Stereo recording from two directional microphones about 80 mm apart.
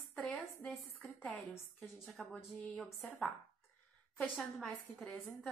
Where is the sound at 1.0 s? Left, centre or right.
Centre.